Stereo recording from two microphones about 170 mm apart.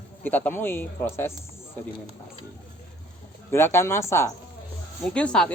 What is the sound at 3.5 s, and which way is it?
Speech, 15° left (ahead or behind).